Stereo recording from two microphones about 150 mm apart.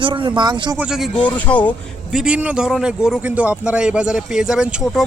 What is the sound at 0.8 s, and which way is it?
Speech, 5° right (ahead or behind).